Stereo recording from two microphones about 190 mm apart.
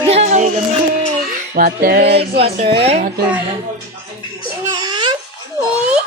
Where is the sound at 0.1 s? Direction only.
35° right (ahead or behind).